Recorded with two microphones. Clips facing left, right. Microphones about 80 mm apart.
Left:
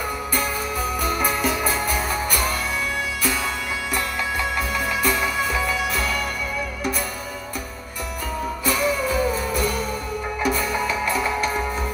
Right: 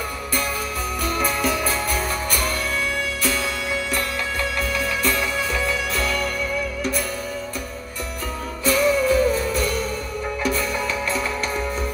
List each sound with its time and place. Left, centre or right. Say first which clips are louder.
1.0 s music: right 1 dB; centre
3.9 s music: even; centre
8.6 s music: right 5 dB; centre